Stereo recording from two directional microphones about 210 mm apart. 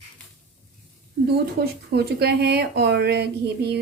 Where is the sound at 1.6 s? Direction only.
50° right (ahead or behind).